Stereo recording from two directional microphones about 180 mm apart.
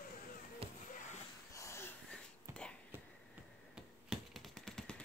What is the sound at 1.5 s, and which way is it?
Wheeze, 15° left (ahead or behind).